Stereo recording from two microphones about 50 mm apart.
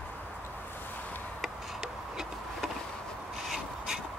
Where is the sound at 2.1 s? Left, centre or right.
Centre.